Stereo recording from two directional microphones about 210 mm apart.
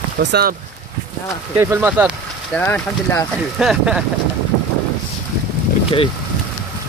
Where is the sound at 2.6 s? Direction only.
10° left (ahead or behind).